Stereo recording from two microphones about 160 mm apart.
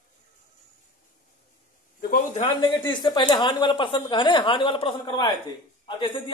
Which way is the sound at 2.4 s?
30° left (ahead or behind).